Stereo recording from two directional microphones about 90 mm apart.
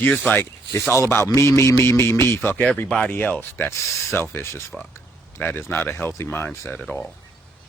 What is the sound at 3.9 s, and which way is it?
Speech, 30° left (ahead or behind).